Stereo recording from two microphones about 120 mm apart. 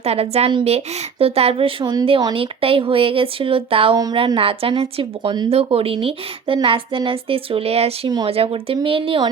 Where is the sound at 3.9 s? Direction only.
30° right (ahead or behind).